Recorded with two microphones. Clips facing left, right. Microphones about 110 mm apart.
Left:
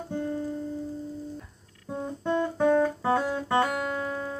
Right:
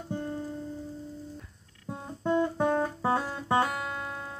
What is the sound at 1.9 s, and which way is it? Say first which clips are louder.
Music: left 1 dB; 5° right (ahead or behind).